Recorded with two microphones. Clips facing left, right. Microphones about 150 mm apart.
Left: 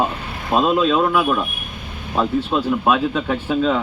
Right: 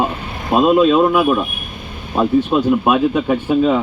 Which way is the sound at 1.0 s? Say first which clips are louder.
Right 4 dB; 20° right (ahead or behind).